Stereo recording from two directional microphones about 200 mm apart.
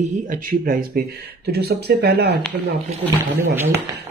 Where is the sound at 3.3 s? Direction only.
10° right (ahead or behind).